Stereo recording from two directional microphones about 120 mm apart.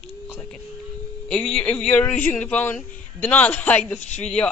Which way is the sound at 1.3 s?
5° left (ahead or behind).